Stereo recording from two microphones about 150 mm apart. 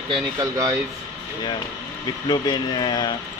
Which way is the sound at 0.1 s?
25° right (ahead or behind).